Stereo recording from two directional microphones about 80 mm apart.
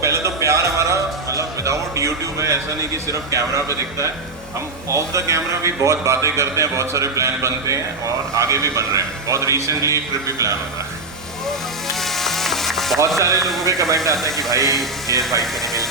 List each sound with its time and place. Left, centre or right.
0.0 s music: right
4.9 s a man's voice: right
11.4 s sizzle: centre
13.1 s a man's voice: right